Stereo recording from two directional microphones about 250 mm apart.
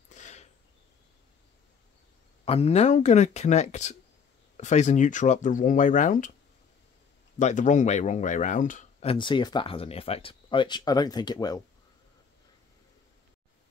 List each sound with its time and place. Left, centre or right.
0.1 s a sound: left
2.4 s speech: left
7.3 s speech: left; by 11.6 s centre